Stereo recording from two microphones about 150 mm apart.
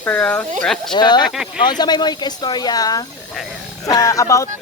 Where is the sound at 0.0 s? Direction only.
10° left (ahead or behind).